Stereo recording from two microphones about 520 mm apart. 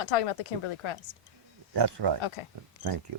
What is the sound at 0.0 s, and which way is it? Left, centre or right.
Speech, left.